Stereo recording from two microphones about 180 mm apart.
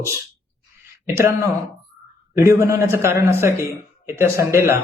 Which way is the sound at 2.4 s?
15° right (ahead or behind).